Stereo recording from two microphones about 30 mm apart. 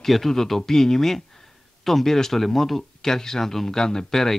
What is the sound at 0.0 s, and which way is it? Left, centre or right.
Speech, centre.